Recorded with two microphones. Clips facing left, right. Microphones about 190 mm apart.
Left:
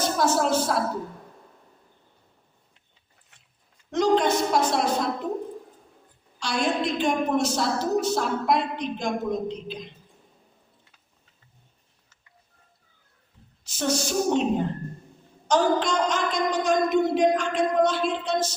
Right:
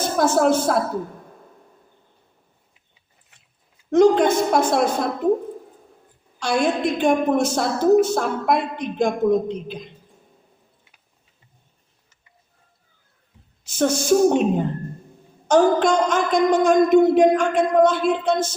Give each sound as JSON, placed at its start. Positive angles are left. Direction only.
{"t": 0.0, "sound": "a woman's voice", "side_deg": -50}
{"t": 3.9, "sound": "a woman's voice", "side_deg": -50}
{"t": 6.4, "sound": "a woman's voice", "side_deg": -50}
{"t": 13.7, "sound": "a woman's voice", "side_deg": -50}